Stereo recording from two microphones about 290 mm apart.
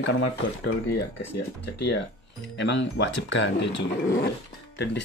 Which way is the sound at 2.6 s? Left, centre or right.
Left.